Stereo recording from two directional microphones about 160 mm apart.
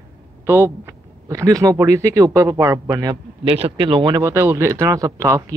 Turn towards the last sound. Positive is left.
turn(degrees=-20)  # may be behind; listen again after turning